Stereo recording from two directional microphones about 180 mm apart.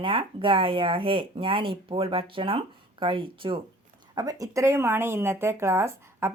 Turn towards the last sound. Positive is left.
turn(degrees=-15)  # may be behind; listen again after turning